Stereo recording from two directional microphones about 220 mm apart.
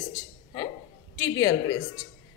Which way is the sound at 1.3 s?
15° left (ahead or behind).